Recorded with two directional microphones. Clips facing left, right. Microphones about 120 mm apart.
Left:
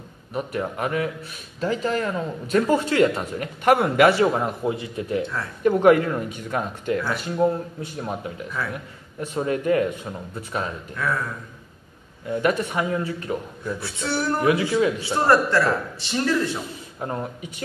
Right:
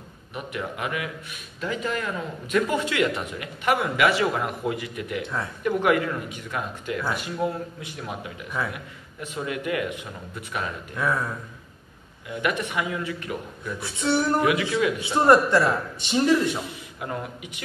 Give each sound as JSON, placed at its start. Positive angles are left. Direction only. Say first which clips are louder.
{"t": 0.3, "sound": "speech", "louder": "left 5 dB", "side_deg": 35}
{"t": 3.6, "sound": "a man's voice", "louder": "left 5 dB", "side_deg": 50}
{"t": 4.3, "sound": "a man's voice", "louder": "left 3 dB", "side_deg": 25}
{"t": 5.2, "sound": "a man's voice", "louder": "left 1 dB", "side_deg": -20}
{"t": 5.6, "sound": "speech", "louder": "left 6 dB", "side_deg": 40}
{"t": 8.6, "sound": "a man's voice", "louder": "right 1 dB", "side_deg": -20}
{"t": 9.2, "sound": "speech", "louder": "left 6 dB", "side_deg": 40}
{"t": 11.0, "sound": "a man's voice", "louder": "right 1 dB", "side_deg": -20}
{"t": 12.3, "sound": "speech", "louder": "left 5 dB", "side_deg": 40}
{"t": 13.7, "sound": "a man's voice", "louder": "right 5 dB", "side_deg": -20}
{"t": 14.4, "sound": "speech", "louder": "left 3 dB", "side_deg": 30}
{"t": 15.0, "sound": "a man's voice", "louder": "right 1 dB", "side_deg": -20}
{"t": 17.0, "sound": "speech", "louder": "left 3 dB", "side_deg": 35}